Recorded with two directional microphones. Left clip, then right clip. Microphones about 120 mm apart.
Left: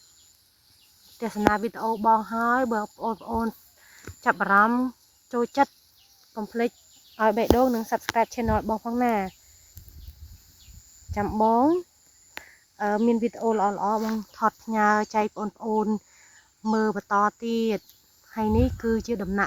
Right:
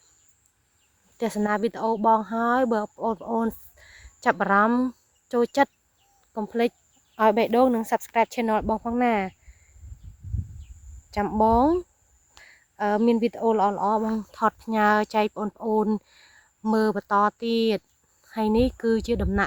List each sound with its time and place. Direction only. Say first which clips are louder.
1.2 s speech: left 1 dB; 40° right (ahead or behind)
1.9 s speech: even; 40° right (ahead or behind)
2.8 s speech: right 2 dB; 30° right (ahead or behind)
6.3 s speech: right 3 dB; 45° right (ahead or behind)
11.1 s speech: right 1 dB; 25° right (ahead or behind)
12.4 s a sound: right 1 dB; 35° right (ahead or behind)
13.7 s speech: right 2 dB; 25° right (ahead or behind)
14.2 s speech: right 1 dB; 35° right (ahead or behind)
15.4 s speech: right 2 dB; 15° right (ahead or behind)
15.7 s speech: right 2 dB; 35° right (ahead or behind)
17.2 s speech: right 2 dB; 45° right (ahead or behind)